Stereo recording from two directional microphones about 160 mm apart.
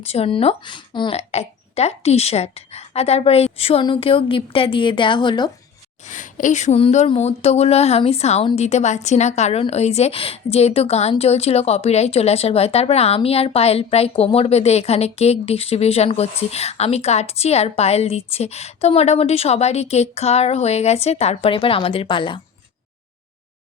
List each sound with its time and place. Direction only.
0.0 s speech: 40° left (ahead or behind)
6.1 s speech: 50° left (ahead or behind); by 22.4 s 30° left (ahead or behind)